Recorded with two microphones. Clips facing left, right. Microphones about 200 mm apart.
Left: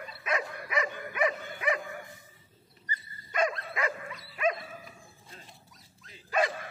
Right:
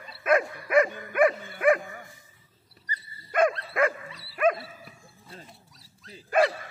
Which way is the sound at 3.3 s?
55° right (ahead or behind).